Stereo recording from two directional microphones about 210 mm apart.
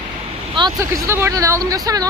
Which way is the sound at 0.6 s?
20° right (ahead or behind).